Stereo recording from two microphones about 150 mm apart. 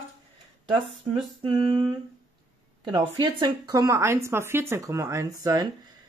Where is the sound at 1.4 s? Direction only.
40° right (ahead or behind).